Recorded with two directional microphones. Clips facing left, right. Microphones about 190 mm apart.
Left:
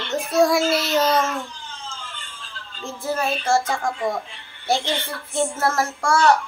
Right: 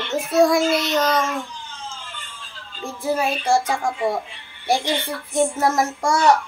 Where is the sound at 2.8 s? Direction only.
10° right (ahead or behind).